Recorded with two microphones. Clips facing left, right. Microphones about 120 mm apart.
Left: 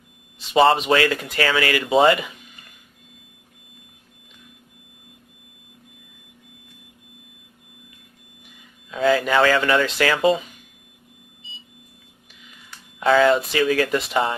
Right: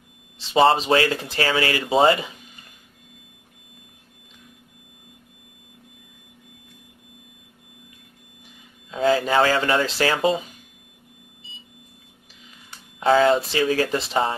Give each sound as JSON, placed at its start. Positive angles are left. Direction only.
{"t": 0.5, "sound": "speech", "side_deg": -30}
{"t": 8.9, "sound": "speech", "side_deg": -30}
{"t": 13.0, "sound": "speech", "side_deg": -35}